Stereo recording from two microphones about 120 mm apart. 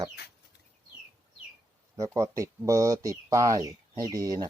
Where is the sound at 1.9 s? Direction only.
25° right (ahead or behind).